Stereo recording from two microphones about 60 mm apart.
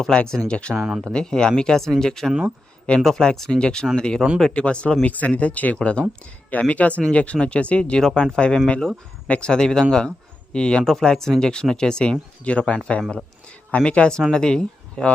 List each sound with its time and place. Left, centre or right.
0.3 s speech: centre
0.8 s speech: centre
1.0 s speech: centre
13.7 s speech: left